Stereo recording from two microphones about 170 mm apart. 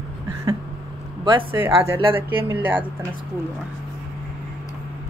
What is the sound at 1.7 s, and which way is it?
Speech, 30° right (ahead or behind).